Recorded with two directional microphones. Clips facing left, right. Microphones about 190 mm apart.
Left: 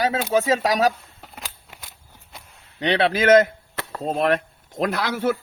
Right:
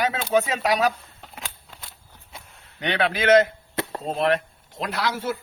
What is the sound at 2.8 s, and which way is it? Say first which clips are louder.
A man's voice: left 4 dB; 35° left (ahead or behind).